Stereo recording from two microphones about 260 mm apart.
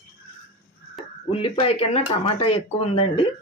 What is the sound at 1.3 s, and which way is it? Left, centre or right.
Speech, left.